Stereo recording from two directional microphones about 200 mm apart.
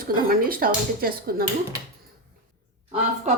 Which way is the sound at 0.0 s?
45° right (ahead or behind).